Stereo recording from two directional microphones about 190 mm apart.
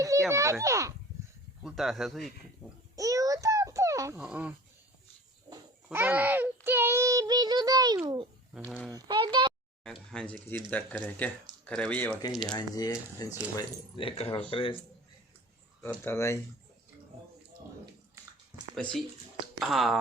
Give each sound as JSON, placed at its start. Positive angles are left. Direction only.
{"t": 0.0, "sound": "a child's voice", "side_deg": -15}
{"t": 1.6, "sound": "speech", "side_deg": 0}
{"t": 2.9, "sound": "a sound", "side_deg": -15}
{"t": 4.2, "sound": "a child's voice", "side_deg": -5}
{"t": 9.8, "sound": "speech", "side_deg": 5}
{"t": 12.5, "sound": "speech", "side_deg": 20}
{"t": 16.0, "sound": "speech", "side_deg": 15}
{"t": 18.7, "sound": "speech", "side_deg": 0}